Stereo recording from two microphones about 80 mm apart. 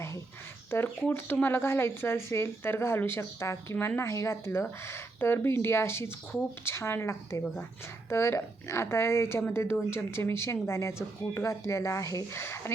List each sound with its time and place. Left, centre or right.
0.7 s speech: left
12.4 s speech: left